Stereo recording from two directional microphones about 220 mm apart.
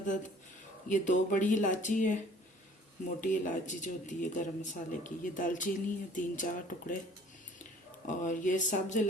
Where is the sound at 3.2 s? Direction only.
35° left (ahead or behind).